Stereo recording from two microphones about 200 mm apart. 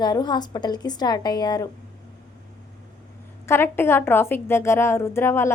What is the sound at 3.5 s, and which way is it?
A woman's voice, 10° left (ahead or behind).